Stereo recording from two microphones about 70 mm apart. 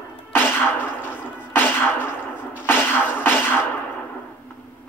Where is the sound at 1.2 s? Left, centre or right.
Left.